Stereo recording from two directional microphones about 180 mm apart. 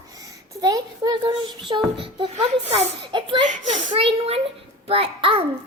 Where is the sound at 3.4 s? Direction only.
45° right (ahead or behind).